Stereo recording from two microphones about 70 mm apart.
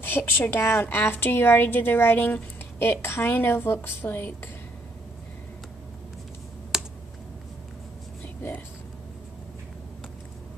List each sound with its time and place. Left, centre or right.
0.0 s a woman's voice: left
6.7 s computer keyboard: centre